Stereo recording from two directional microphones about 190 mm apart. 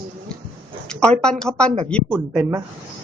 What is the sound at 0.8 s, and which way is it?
Speech, 5° left (ahead or behind).